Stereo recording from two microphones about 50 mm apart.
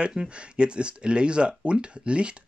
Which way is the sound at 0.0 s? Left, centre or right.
Centre.